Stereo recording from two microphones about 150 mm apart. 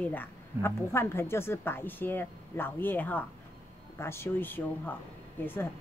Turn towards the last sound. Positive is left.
turn(degrees=15)  # may be behind; listen again after turning